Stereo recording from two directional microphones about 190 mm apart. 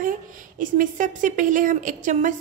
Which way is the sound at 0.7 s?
40° right (ahead or behind).